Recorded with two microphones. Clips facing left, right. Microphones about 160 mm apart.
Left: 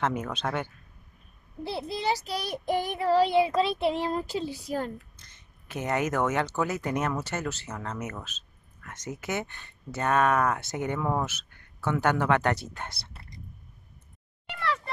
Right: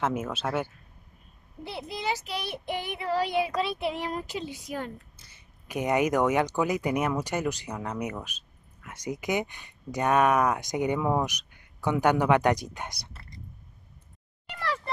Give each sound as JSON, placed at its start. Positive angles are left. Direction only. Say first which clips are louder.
{"t": 0.0, "sound": "speech", "louder": "even", "side_deg": -5}
{"t": 1.6, "sound": "child singing", "louder": "left 3 dB", "side_deg": 30}
{"t": 5.1, "sound": "speech", "louder": "even", "side_deg": -10}